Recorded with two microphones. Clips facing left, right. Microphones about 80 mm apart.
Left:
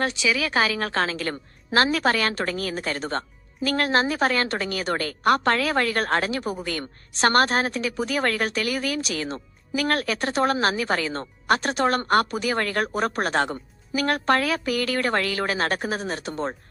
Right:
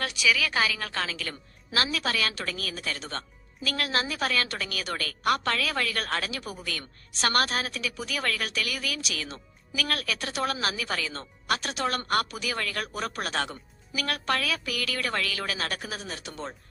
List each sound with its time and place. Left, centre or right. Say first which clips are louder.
0.0 s a woman's voice: left 3 dB; left